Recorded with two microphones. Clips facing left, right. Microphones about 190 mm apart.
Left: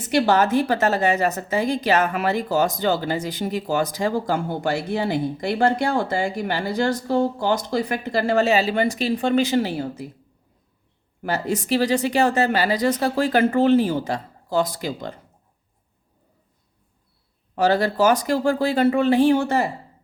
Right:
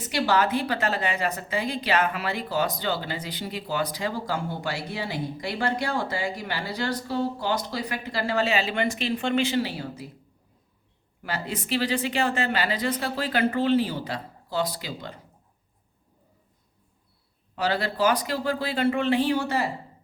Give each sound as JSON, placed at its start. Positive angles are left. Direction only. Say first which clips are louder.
{"t": 0.1, "sound": "a woman's voice", "louder": "left 5 dB", "side_deg": 50}
{"t": 11.2, "sound": "a woman's voice", "louder": "left 8 dB", "side_deg": 45}
{"t": 17.5, "sound": "a woman's voice", "louder": "left 7 dB", "side_deg": 45}